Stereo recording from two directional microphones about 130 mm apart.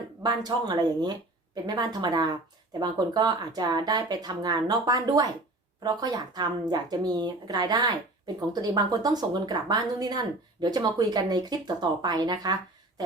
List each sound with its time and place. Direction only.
0.2 s speech: 30° right (ahead or behind)